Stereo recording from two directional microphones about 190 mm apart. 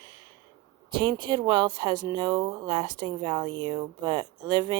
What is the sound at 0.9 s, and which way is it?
Speech, 25° right (ahead or behind).